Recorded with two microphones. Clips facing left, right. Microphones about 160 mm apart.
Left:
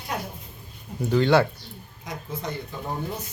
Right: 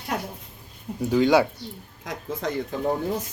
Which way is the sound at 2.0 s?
90° right.